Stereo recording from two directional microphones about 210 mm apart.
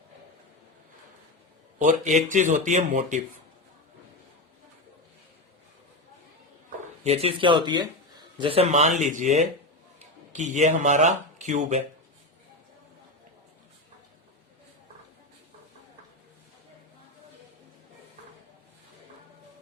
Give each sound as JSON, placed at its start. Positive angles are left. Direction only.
{"t": 1.8, "sound": "speech", "side_deg": -35}
{"t": 7.0, "sound": "speech", "side_deg": -30}